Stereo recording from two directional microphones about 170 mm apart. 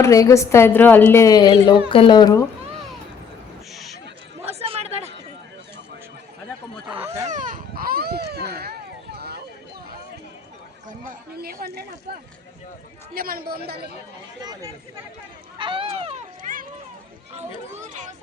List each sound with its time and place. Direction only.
0.0 s a woman's voice: 20° left (ahead or behind)
4.4 s chatter: 35° right (ahead or behind)
7.3 s a sound: 50° right (ahead or behind); by 9.4 s 70° right (ahead or behind)
10.8 s a sound: 50° right (ahead or behind)
13.1 s a woman's voice: 60° right (ahead or behind)
14.4 s speech: 25° right (ahead or behind)
15.5 s a sound: 30° right (ahead or behind)
16.4 s run: 55° right (ahead or behind)
17.3 s speech: 45° right (ahead or behind)